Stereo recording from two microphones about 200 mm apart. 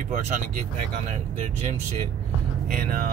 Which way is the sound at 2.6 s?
45° right (ahead or behind).